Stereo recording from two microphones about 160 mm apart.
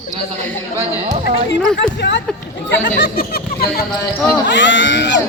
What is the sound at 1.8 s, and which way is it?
Speech, 90° left.